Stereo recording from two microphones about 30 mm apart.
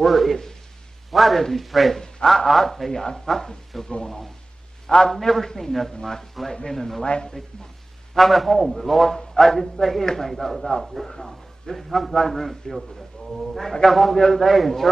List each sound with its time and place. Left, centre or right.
0.0 s a man's voice: centre
2.9 s a man's voice: left
3.7 s a man's voice: centre
4.8 s a man's voice: left
5.3 s a man's voice: centre
7.1 s speech: left
8.1 s a man's voice: centre
9.0 s a man's voice: centre
10.3 s a man's voice: centre
11.1 s a man's voice: centre
14.1 s a man's voice: centre
14.4 s a man's voice: centre